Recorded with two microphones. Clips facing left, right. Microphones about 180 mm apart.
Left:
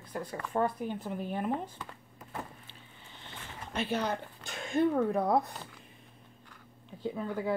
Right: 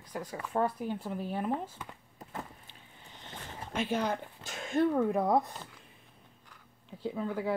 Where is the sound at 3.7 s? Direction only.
10° right (ahead or behind).